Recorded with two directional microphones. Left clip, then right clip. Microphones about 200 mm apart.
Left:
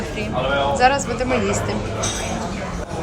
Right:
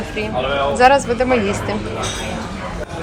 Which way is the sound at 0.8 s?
5° left (ahead or behind).